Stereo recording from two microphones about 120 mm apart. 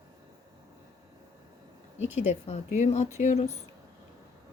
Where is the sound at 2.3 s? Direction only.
70° left (ahead or behind).